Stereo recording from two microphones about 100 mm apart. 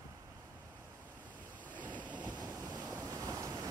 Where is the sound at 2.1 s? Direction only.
45° right (ahead or behind).